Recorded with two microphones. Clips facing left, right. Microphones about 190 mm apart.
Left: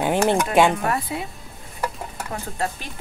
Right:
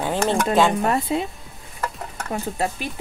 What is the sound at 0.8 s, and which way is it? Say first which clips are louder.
Speech: right 4 dB; 25° right (ahead or behind).